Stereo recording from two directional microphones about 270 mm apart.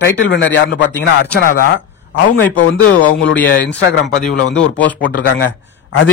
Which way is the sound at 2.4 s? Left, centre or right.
Left.